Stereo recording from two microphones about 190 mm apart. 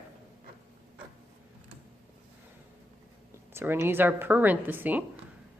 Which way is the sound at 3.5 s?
10° right (ahead or behind).